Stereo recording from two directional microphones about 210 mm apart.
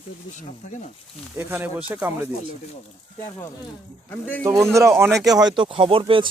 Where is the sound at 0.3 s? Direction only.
35° left (ahead or behind).